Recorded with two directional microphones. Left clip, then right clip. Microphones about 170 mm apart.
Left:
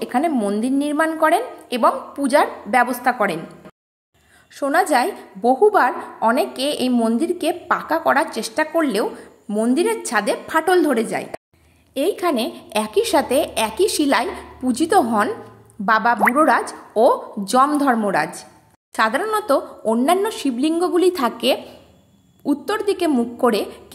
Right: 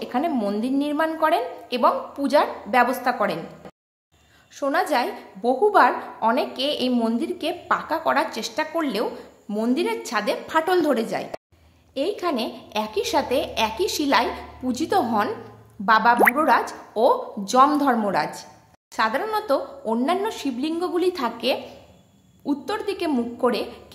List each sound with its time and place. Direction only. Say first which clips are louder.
0.0 s a woman's voice: left 4 dB; 25° left (ahead or behind)
4.6 s a woman's voice: left 5 dB; 25° left (ahead or behind)
11.9 s a woman's voice: left 5 dB; 25° left (ahead or behind)